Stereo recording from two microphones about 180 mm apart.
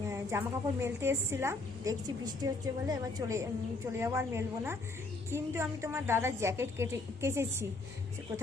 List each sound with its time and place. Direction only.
0.1 s a woman's voice: 15° right (ahead or behind)